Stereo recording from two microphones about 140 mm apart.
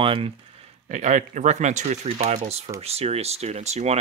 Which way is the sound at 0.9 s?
60° right (ahead or behind).